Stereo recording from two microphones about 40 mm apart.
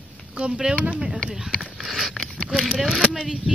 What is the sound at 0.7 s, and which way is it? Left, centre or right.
Speech, right.